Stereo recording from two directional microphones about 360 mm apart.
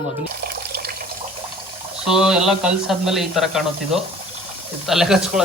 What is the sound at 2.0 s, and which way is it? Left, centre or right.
Speech, centre.